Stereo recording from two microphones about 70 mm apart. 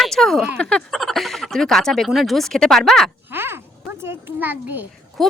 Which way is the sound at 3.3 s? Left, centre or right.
Right.